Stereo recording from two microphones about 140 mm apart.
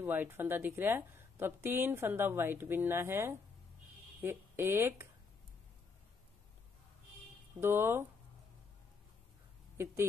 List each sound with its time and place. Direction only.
0.0 s a woman's voice: 15° right (ahead or behind)
7.6 s a woman's voice: 15° right (ahead or behind)